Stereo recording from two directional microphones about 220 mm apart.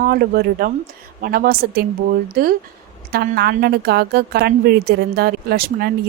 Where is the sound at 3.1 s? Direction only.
45° right (ahead or behind).